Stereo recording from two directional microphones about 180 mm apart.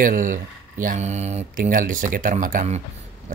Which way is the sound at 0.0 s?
50° right (ahead or behind).